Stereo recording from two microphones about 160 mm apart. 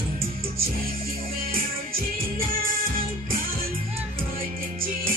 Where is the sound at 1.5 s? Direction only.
65° right (ahead or behind).